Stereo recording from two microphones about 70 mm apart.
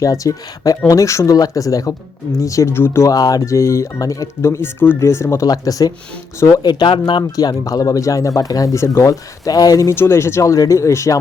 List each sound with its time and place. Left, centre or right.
0.0 s speech: left
2.7 s speech: left
3.0 s speech: left
5.5 s speech: left
6.6 s speech: left
9.9 s speech: left
10.5 s speech: left